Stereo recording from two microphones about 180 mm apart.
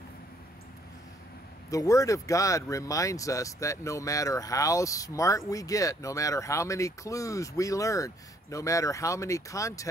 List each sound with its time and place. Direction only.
1.7 s speech: 20° left (ahead or behind)